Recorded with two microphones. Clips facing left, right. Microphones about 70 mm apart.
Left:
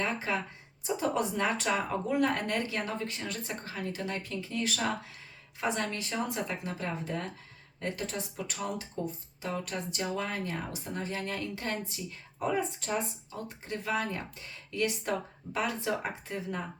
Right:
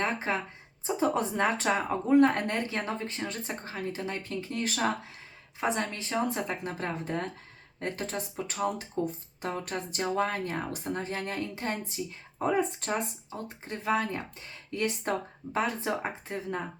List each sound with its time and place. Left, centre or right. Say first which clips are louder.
0.0 s speech: right 2 dB; right
5.5 s a woman's voice: right 2 dB; right
12.5 s speech: right 3 dB; right
13.7 s a woman's voice: right 3 dB; right